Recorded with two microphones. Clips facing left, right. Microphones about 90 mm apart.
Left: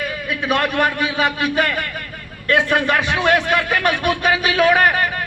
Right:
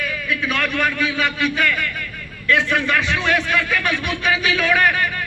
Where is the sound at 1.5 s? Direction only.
50° left (ahead or behind).